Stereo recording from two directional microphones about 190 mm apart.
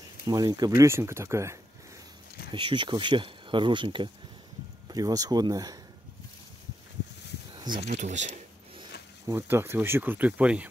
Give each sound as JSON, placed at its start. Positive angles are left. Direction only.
{"t": 0.3, "sound": "speech", "side_deg": -20}
{"t": 2.5, "sound": "speech", "side_deg": -25}
{"t": 7.5, "sound": "a sound", "side_deg": -20}
{"t": 7.9, "sound": "speech", "side_deg": -40}
{"t": 9.2, "sound": "speech", "side_deg": -15}